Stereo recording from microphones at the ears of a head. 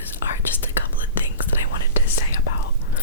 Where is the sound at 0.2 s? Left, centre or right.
Left.